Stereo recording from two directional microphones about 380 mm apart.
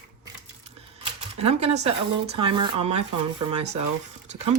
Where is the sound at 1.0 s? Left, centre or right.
Centre.